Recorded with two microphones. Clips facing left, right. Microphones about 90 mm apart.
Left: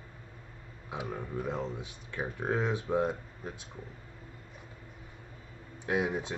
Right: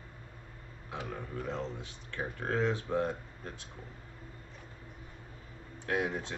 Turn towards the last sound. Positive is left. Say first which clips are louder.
# left 2 dB
turn(degrees=15)  # may be behind; listen again after turning